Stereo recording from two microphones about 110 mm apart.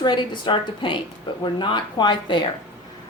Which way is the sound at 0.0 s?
45° left (ahead or behind).